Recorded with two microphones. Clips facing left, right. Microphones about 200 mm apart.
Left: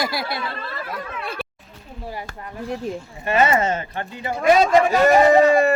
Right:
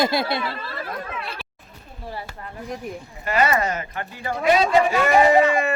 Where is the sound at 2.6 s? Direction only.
15° right (ahead or behind).